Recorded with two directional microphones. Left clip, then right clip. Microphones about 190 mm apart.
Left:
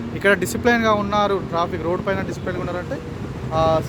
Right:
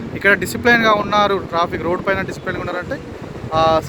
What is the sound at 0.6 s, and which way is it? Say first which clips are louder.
Speech: right 5 dB; centre (ahead or behind).